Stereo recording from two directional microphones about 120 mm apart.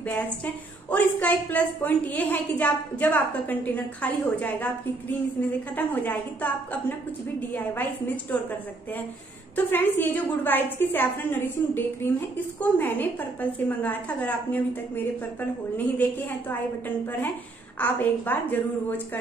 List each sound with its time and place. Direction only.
0.8 s a woman's voice: 15° left (ahead or behind)
5.8 s a woman's voice: 15° left (ahead or behind)
9.7 s a woman's voice: 15° left (ahead or behind)
15.8 s a woman's voice: 15° left (ahead or behind)
17.7 s a woman's voice: 15° left (ahead or behind)